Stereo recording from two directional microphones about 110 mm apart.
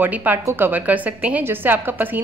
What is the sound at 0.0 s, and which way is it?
A woman's voice, 15° right (ahead or behind).